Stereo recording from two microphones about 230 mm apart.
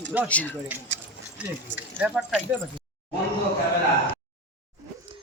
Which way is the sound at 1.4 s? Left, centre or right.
Centre.